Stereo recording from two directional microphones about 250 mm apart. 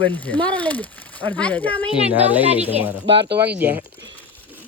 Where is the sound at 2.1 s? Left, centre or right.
Centre.